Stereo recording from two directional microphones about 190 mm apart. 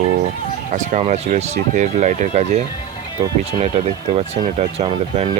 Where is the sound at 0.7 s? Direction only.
40° right (ahead or behind).